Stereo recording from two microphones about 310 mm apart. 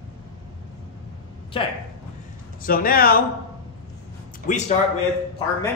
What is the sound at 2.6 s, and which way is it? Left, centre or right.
Speech, left.